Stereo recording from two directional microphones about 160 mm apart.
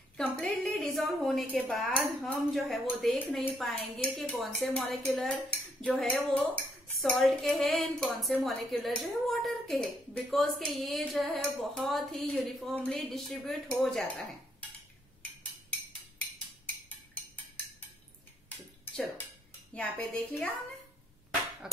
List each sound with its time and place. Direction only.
0.2 s a woman's voice: 5° left (ahead or behind)
19.7 s dishes: 10° left (ahead or behind)
21.6 s speech: 5° right (ahead or behind)